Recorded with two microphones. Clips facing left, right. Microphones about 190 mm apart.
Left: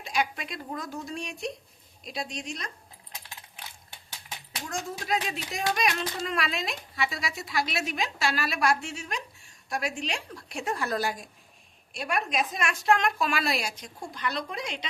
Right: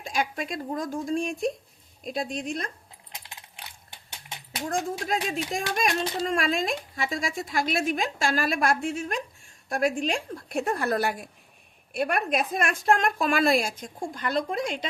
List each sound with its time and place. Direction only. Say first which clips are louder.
0.0 s a child's voice: right 1 dB; 45° right (ahead or behind)
4.6 s a child's voice: right 7 dB; 55° right (ahead or behind)